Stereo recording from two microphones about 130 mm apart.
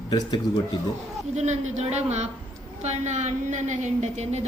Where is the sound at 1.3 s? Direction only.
60° right (ahead or behind).